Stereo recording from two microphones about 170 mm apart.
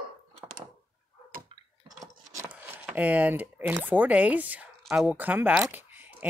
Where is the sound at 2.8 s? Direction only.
10° right (ahead or behind).